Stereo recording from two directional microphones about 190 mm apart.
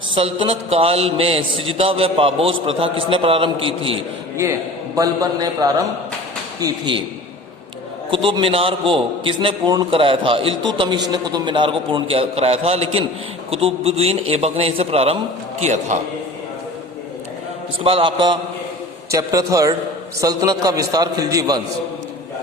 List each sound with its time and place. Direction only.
0.1 s a man's voice: 30° right (ahead or behind)
4.9 s a man's voice: 20° right (ahead or behind)
8.1 s a man's voice: 25° right (ahead or behind)
17.8 s a man's voice: 30° right (ahead or behind)